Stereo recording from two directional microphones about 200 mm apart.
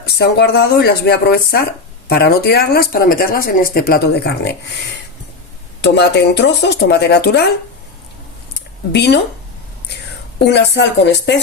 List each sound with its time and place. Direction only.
0.0 s speech: 55° left (ahead or behind)
5.8 s speech: 60° left (ahead or behind)
8.9 s speech: 55° left (ahead or behind)
10.4 s speech: 55° left (ahead or behind)